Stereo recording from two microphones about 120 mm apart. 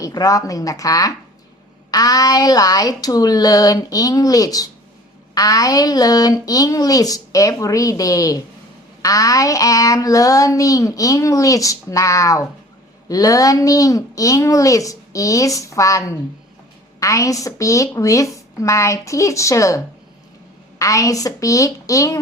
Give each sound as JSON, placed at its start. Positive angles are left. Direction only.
{"t": 0.0, "sound": "child singing", "side_deg": 30}
{"t": 1.9, "sound": "speech", "side_deg": 30}
{"t": 9.0, "sound": "child singing", "side_deg": 30}